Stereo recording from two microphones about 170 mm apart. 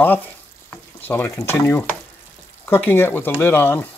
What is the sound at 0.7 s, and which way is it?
Frying, 10° left (ahead or behind).